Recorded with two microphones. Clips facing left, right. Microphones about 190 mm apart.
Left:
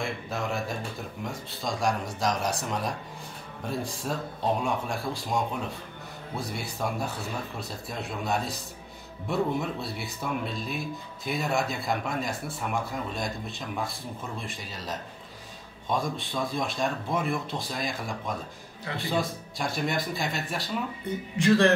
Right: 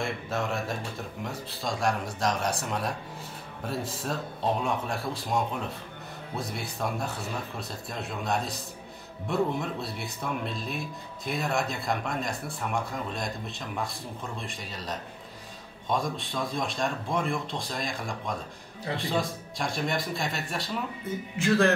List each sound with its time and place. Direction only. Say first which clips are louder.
0.0 s speech: right 1 dB; centre (ahead or behind)